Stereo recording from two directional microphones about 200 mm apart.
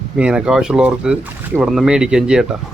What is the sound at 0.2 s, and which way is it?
Speech, 5° right (ahead or behind).